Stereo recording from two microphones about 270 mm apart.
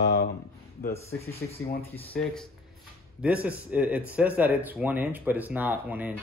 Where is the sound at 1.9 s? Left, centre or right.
Centre.